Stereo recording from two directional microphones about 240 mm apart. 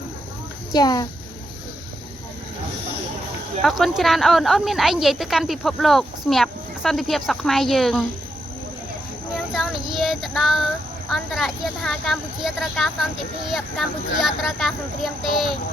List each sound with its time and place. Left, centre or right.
0.7 s a child's voice: centre
3.6 s a woman's voice: centre
9.6 s a woman's voice: centre